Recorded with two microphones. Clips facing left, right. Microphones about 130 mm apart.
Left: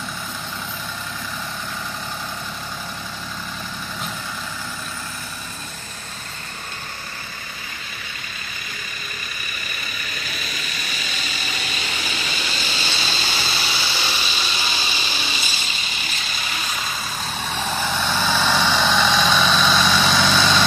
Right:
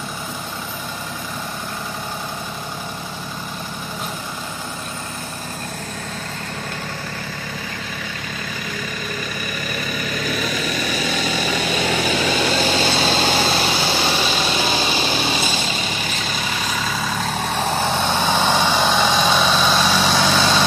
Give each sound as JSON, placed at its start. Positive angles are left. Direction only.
{"t": 10.6, "sound": "vehicle", "side_deg": -90}
{"t": 13.1, "sound": "vehicle", "side_deg": -60}
{"t": 17.6, "sound": "vehicle", "side_deg": -30}
{"t": 18.6, "sound": "vehicle", "side_deg": -15}